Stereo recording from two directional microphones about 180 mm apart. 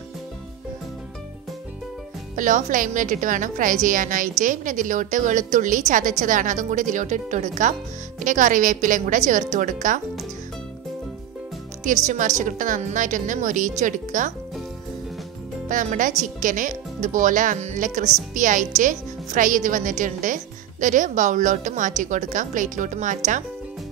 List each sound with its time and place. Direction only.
2.3 s a woman's voice: 45° right (ahead or behind)
12.4 s a woman's voice: 45° right (ahead or behind)
15.7 s a woman's voice: 45° right (ahead or behind)